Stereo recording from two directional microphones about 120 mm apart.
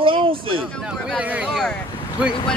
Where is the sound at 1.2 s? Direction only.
15° right (ahead or behind).